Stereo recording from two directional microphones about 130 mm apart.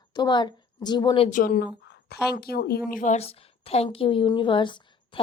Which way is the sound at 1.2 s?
90° left.